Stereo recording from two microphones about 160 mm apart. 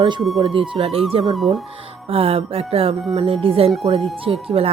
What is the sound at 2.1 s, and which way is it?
Speech, 35° right (ahead or behind).